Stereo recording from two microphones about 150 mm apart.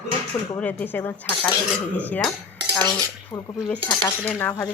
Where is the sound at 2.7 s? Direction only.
25° left (ahead or behind).